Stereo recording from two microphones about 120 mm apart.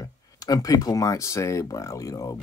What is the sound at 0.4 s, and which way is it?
Speech, 30° left (ahead or behind).